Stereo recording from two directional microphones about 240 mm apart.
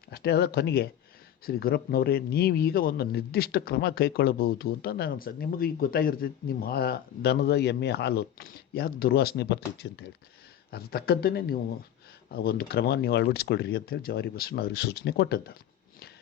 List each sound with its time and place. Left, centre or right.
0.1 s speech: left